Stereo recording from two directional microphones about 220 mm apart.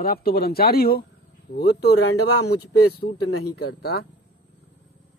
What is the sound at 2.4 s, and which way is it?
Speech, 90° left.